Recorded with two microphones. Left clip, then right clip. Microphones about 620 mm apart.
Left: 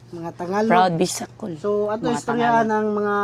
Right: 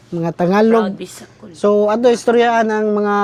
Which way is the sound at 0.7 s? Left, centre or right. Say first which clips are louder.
Right 1 dB; left.